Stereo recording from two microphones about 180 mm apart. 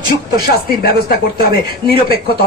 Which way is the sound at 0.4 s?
60° left (ahead or behind).